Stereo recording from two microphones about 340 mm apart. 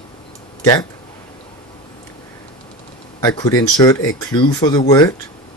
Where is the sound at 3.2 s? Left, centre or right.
Centre.